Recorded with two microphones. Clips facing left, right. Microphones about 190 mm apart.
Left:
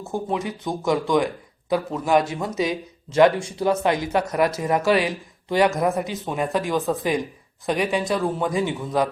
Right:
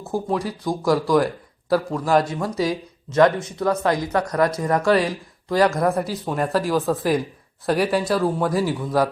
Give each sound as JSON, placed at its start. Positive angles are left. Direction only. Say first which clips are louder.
{"t": 0.0, "sound": "speech", "louder": "right 2 dB", "side_deg": 0}
{"t": 2.4, "sound": "speech", "louder": "right 1 dB", "side_deg": 20}
{"t": 4.4, "sound": "speech", "louder": "right 1 dB", "side_deg": 5}